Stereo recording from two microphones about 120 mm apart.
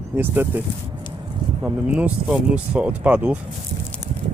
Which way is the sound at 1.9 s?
10° right (ahead or behind).